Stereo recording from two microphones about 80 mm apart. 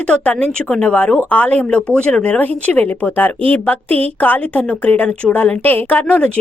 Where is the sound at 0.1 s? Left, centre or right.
Centre.